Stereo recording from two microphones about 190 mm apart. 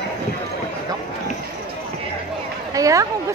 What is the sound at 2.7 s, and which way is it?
Speech, 15° right (ahead or behind).